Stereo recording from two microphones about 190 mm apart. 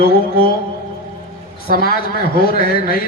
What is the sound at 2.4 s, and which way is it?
Speech, 50° left (ahead or behind).